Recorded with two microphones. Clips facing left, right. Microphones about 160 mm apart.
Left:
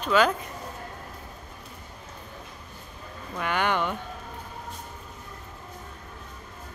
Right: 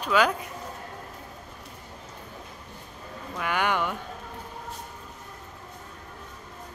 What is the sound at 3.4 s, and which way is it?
Speech, 10° right (ahead or behind).